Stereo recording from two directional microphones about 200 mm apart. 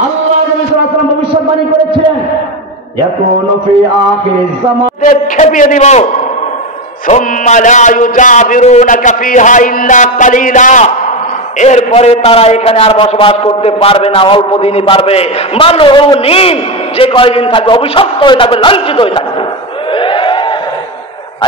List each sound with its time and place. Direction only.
5.0 s speech: 40° left (ahead or behind)
7.1 s a man's voice: 35° left (ahead or behind)
20.0 s a sound: 25° left (ahead or behind)